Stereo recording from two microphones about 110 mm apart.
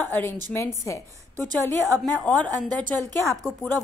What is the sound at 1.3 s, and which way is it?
Speech, 30° right (ahead or behind).